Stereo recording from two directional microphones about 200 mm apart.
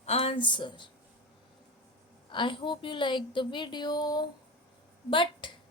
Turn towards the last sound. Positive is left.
turn(degrees=25)  # may be behind; listen again after turning